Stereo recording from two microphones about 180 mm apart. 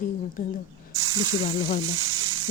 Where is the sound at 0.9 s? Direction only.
20° right (ahead or behind).